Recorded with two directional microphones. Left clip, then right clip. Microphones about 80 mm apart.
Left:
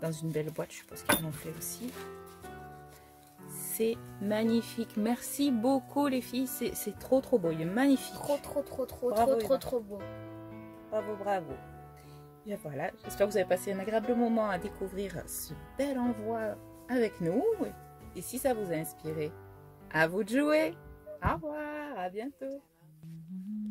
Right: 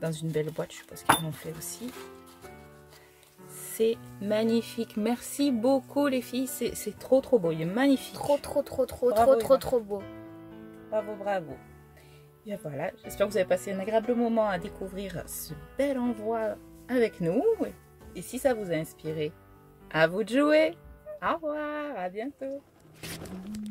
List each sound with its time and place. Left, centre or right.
0.0 s speech: left
3.7 s speech: left
8.2 s speech: right
9.3 s speech: right
10.9 s speech: left
12.4 s speech: left
14.2 s speech: left
15.0 s speech: left
18.1 s speech: left
19.9 s speech: left
21.2 s music: left
21.7 s speech: left
22.0 s music: left
23.0 s speech: centre